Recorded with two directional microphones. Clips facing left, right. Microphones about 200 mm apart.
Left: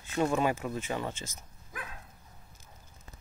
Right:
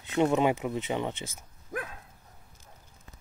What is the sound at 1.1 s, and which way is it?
Speech, 55° right (ahead or behind).